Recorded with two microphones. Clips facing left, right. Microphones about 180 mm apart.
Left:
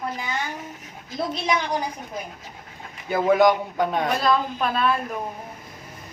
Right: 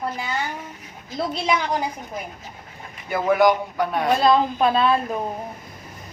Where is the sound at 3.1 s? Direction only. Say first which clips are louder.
Even; 20° left (ahead or behind).